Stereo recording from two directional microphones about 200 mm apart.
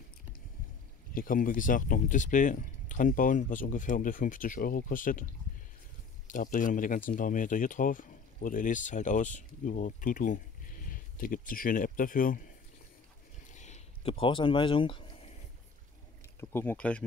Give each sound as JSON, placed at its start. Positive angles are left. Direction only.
{"t": 1.1, "sound": "speech", "side_deg": 45}
{"t": 6.2, "sound": "speech", "side_deg": 40}
{"t": 13.5, "sound": "speech", "side_deg": 35}
{"t": 16.3, "sound": "speech", "side_deg": 10}